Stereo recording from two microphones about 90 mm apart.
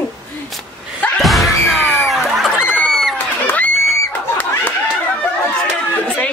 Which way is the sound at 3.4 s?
15° left (ahead or behind).